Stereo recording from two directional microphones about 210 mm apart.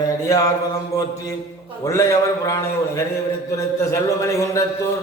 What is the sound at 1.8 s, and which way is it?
A man's voice, 15° left (ahead or behind).